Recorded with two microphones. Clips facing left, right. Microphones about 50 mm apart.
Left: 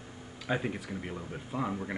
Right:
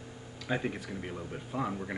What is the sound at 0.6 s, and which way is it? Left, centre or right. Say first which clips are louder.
Speech: even; centre.